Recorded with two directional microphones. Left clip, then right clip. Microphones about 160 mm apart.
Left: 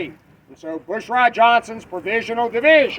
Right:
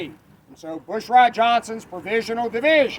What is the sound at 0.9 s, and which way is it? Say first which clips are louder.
Speech: right 2 dB; 30° right (ahead or behind).